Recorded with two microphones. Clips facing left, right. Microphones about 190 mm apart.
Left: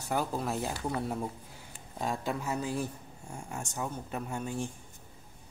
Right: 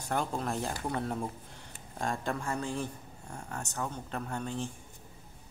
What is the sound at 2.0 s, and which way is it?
Speech, 5° left (ahead or behind).